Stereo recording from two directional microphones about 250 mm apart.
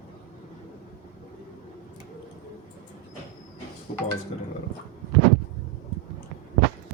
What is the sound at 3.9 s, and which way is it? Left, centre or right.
Speech, left.